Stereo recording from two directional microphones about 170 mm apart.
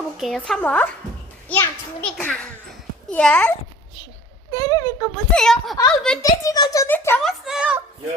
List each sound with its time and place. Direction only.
0.2 s a woman's voice: centre (ahead or behind)
4.5 s speech: 20° left (ahead or behind)
5.1 s a woman's voice: 5° left (ahead or behind)
6.2 s a child's voice: 20° left (ahead or behind)
7.2 s a woman's voice: centre (ahead or behind)